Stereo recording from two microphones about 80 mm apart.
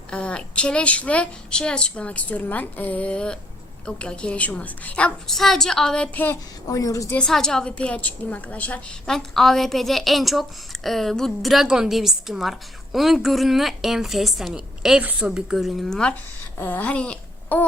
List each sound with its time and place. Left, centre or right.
0.1 s a woman's voice: centre
5.3 s a woman's voice: centre
6.7 s a woman's voice: left
7.2 s a woman's voice: centre
9.0 s a woman's voice: centre
16.6 s speech: left